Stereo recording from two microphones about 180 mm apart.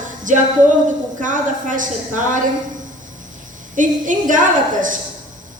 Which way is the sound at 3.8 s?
45° right (ahead or behind).